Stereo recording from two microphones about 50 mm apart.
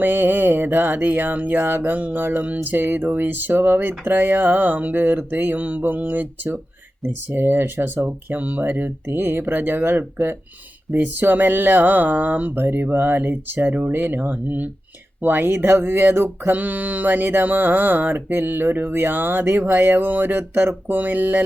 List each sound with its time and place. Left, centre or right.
0.0 s speech: right
9.0 s speech: right
16.5 s speech: right
20.8 s speech: right